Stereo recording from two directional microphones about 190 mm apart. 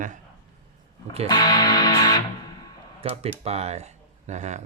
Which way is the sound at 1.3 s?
20° left (ahead or behind).